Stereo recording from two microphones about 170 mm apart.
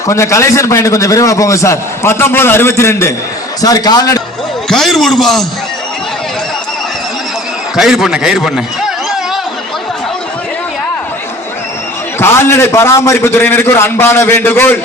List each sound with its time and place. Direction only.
0.1 s a man's voice: 15° left (ahead or behind)
4.7 s a man's voice: centre (ahead or behind)
7.8 s a man's voice: centre (ahead or behind)
12.2 s a man's voice: 15° left (ahead or behind)